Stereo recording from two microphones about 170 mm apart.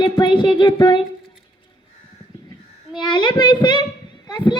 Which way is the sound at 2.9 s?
25° left (ahead or behind).